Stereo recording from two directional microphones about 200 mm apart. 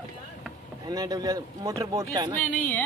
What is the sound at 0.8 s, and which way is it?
Speech, 20° right (ahead or behind).